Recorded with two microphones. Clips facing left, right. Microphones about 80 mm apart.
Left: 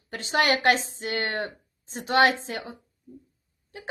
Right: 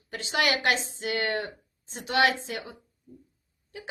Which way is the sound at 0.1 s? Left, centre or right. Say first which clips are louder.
Left 3 dB; left.